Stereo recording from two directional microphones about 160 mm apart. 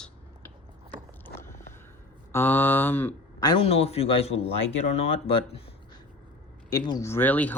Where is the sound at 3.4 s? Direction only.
35° left (ahead or behind).